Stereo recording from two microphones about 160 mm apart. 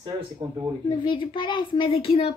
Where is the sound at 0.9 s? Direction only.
30° left (ahead or behind).